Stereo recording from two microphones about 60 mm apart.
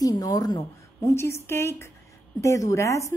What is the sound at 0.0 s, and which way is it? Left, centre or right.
A woman's voice, left.